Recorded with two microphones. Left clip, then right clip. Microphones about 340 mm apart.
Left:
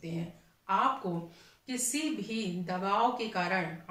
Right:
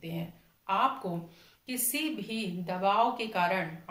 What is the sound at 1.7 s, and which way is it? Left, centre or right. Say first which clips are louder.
Speech: even; centre.